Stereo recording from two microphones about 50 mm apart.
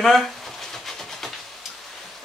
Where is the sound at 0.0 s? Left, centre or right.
Centre.